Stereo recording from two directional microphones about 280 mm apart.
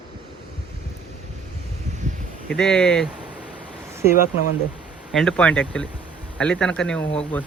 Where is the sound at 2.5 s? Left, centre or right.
Centre.